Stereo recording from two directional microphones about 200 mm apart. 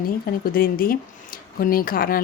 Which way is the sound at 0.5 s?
45° left (ahead or behind).